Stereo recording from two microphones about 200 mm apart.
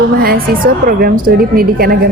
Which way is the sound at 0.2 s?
50° right (ahead or behind).